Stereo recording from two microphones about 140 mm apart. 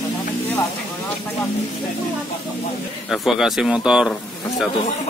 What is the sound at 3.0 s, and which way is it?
Speech, centre (ahead or behind).